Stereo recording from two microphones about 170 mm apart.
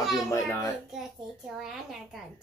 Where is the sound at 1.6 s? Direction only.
Centre (ahead or behind).